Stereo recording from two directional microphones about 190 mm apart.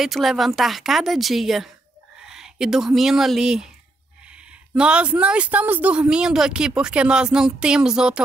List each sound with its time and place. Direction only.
0.0 s speech: centre (ahead or behind)